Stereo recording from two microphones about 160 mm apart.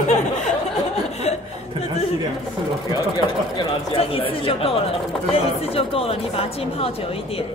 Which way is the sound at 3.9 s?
35° left (ahead or behind).